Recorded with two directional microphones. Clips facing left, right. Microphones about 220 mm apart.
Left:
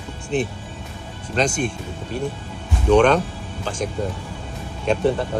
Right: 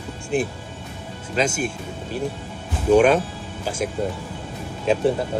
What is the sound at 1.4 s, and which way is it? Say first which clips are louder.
Speech: left 1 dB; 5° right (ahead or behind).